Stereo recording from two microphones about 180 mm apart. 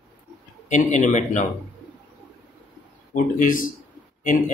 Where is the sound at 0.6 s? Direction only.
45° left (ahead or behind).